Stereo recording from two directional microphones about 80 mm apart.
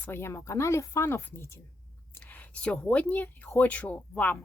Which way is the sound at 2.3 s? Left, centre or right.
Centre.